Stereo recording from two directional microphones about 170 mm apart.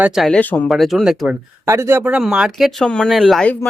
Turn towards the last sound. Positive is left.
turn(degrees=5)  # may be behind; listen again after turning